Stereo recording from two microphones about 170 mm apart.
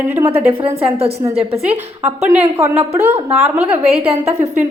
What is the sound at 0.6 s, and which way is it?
Speech, 35° right (ahead or behind).